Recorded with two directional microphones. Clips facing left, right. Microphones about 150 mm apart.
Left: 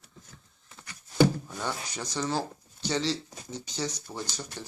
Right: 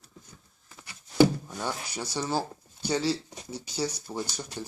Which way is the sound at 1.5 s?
10° right (ahead or behind).